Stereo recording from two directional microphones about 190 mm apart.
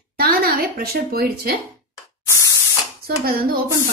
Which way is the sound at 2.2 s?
15° left (ahead or behind).